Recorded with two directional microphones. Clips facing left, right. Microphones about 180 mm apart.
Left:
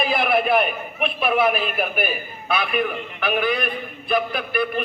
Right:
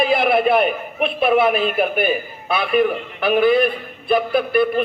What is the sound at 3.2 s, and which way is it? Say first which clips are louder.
A man's voice: right 8 dB; 30° right (ahead or behind).